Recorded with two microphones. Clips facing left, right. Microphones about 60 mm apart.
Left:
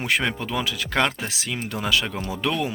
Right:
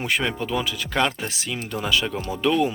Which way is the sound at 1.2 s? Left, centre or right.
Left.